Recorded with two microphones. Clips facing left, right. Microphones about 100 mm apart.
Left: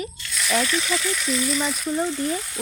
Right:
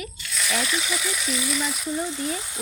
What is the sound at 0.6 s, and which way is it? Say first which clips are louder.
Speech: left 3 dB; 15° right (ahead or behind).